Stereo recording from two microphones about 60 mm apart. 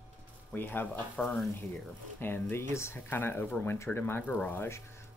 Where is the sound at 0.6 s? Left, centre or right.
Left.